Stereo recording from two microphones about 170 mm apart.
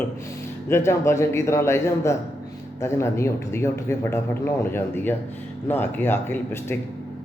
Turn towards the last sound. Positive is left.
turn(degrees=15)  # may be behind; listen again after turning